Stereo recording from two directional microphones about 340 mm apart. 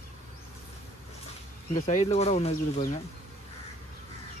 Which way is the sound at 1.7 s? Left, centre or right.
Centre.